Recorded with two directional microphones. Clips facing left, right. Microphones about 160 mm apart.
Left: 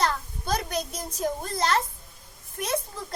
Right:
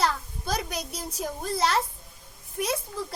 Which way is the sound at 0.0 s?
5° right (ahead or behind).